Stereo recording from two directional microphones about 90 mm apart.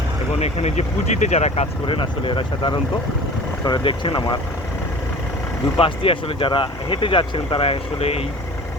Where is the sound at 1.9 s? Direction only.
75° left (ahead or behind); by 4.3 s 50° left (ahead or behind).